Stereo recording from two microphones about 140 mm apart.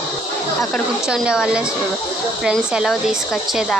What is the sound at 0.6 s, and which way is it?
Speech, centre (ahead or behind).